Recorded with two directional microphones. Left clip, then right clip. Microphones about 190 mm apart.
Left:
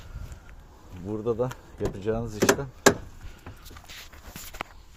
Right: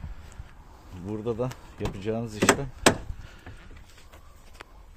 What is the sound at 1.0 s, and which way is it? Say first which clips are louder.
Speech: left 3 dB; 10° right (ahead or behind).